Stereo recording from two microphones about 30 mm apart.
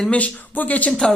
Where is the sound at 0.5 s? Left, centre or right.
Left.